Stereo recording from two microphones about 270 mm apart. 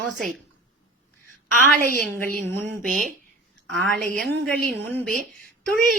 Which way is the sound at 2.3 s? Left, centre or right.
Right.